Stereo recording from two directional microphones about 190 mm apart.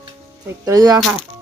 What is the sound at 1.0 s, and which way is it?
Speech, centre (ahead or behind).